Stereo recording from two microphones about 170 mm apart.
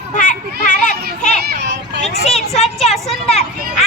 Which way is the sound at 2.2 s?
40° left (ahead or behind).